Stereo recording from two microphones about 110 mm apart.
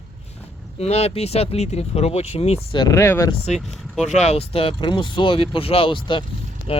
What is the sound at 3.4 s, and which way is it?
Speech, 85° left.